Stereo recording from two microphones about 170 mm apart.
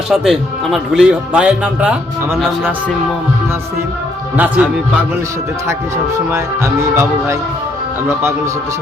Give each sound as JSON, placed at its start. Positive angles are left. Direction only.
{"t": 0.1, "sound": "speech", "side_deg": 0}
{"t": 4.4, "sound": "speech", "side_deg": -10}
{"t": 6.3, "sound": "speech", "side_deg": -15}